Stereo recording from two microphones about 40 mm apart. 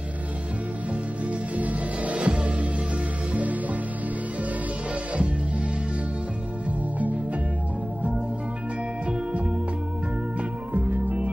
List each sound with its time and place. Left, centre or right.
1.5 s music: right
5.1 s music: right
10.7 s music: right